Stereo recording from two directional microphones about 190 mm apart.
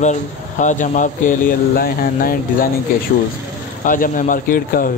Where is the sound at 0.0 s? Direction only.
40° left (ahead or behind).